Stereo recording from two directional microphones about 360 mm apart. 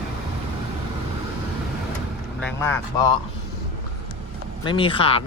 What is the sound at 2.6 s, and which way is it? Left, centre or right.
Speech, centre.